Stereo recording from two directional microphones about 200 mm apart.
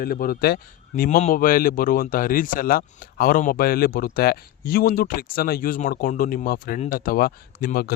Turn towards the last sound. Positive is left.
turn(degrees=50)  # may be behind; listen again after turning